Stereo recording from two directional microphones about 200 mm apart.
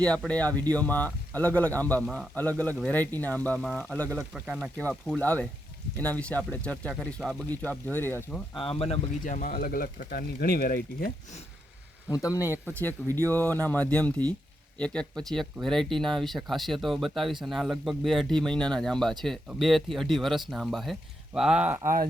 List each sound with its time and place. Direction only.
0.0 s speech: 5° left (ahead or behind)
8.5 s speech: 25° left (ahead or behind); by 11.3 s 45° left (ahead or behind)
12.0 s speech: 15° left (ahead or behind); by 21.8 s 5° right (ahead or behind)